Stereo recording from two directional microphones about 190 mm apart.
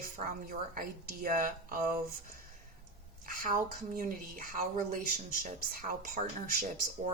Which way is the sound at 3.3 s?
50° right (ahead or behind).